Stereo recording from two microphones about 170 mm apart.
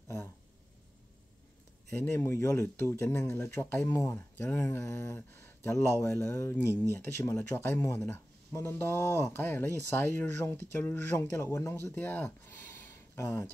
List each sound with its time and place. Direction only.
1.9 s speech: 15° left (ahead or behind)